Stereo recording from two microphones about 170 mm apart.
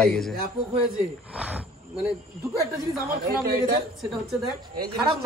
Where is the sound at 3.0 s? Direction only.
65° right (ahead or behind).